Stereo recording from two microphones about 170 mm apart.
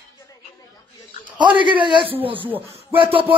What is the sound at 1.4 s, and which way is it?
Speech, 30° right (ahead or behind).